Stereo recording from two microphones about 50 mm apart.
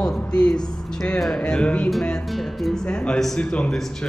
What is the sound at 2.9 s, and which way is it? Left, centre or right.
Speech, centre.